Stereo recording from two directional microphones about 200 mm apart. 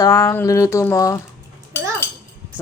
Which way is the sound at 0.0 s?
15° left (ahead or behind).